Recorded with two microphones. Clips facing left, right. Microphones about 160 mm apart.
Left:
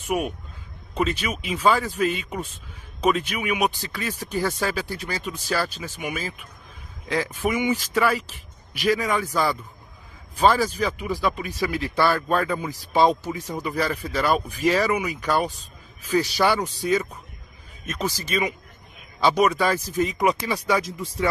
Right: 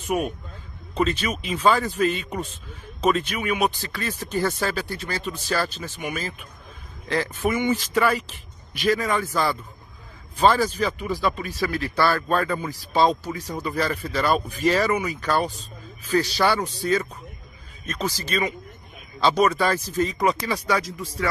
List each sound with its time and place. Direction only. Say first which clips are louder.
0.1 s speech: even; 5° left (ahead or behind)